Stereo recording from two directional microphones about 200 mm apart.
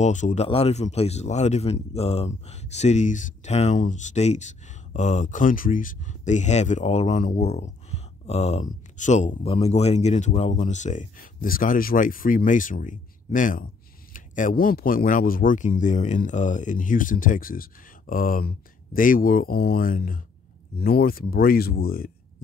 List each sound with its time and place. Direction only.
0.0 s speech: 35° left (ahead or behind)